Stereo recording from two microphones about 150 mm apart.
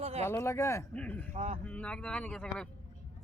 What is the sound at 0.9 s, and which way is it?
Speech, 10° left (ahead or behind).